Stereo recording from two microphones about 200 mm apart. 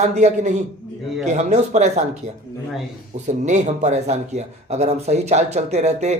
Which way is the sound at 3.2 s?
35° right (ahead or behind).